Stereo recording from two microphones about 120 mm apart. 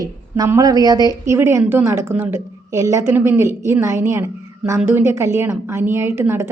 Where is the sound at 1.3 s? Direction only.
20° right (ahead or behind).